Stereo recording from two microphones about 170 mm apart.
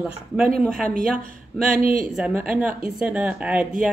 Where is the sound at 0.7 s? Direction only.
55° right (ahead or behind).